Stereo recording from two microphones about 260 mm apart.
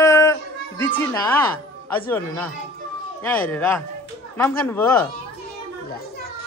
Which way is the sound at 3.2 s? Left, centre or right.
Centre.